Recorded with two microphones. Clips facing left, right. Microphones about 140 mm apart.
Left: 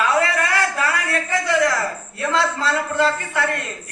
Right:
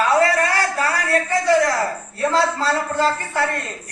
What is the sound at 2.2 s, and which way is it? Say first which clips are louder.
A man's voice: right 2 dB; 35° right (ahead or behind).